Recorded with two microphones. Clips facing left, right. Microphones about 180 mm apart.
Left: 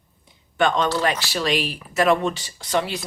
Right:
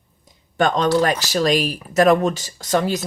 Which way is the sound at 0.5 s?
40° right (ahead or behind).